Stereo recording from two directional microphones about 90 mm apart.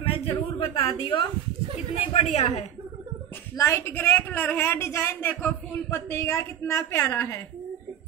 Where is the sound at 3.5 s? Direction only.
35° left (ahead or behind).